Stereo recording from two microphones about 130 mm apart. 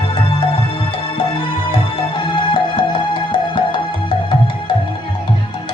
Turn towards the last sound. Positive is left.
turn(degrees=40)  # may be behind; listen again after turning